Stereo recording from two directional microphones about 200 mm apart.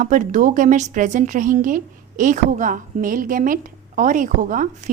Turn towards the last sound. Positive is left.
turn(degrees=-40)  # may be behind; listen again after turning